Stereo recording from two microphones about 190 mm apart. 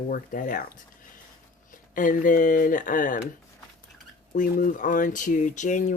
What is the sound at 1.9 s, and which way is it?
Speech, 45° left (ahead or behind).